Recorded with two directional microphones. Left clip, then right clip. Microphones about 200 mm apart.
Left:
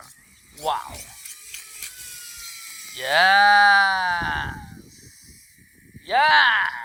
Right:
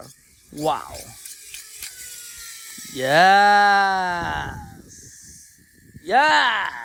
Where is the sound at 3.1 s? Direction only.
45° right (ahead or behind).